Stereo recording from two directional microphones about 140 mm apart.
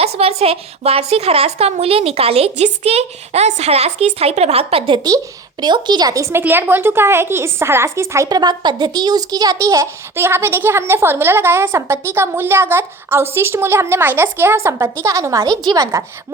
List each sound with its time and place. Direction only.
0.0 s speech: 45° right (ahead or behind)
5.0 s a woman's voice: 30° right (ahead or behind)